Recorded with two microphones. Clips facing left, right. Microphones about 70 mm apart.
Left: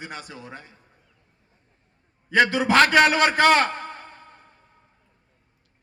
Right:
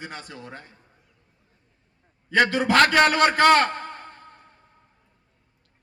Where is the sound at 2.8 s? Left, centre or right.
Right.